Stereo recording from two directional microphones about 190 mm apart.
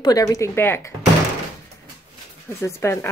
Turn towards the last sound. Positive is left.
turn(degrees=15)  # may be behind; listen again after turning